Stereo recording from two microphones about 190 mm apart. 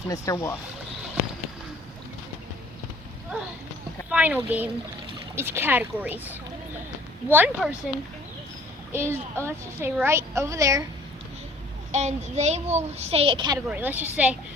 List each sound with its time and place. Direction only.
0.1 s speech: 15° left (ahead or behind)
4.1 s a woman's voice: 10° right (ahead or behind)
8.9 s a woman's voice: 10° right (ahead or behind)
11.9 s a child's voice: 35° right (ahead or behind)
13.7 s a woman's voice: 10° right (ahead or behind)